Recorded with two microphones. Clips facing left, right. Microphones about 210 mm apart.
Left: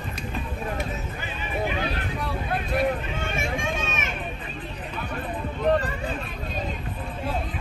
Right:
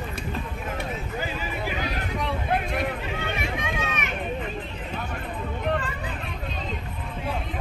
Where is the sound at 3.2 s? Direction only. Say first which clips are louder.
Left 1 dB; 45° left (ahead or behind).